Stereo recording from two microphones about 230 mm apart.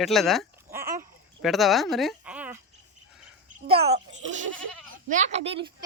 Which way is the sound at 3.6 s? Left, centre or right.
Right.